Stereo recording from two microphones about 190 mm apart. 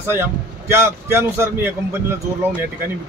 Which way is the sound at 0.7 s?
15° right (ahead or behind).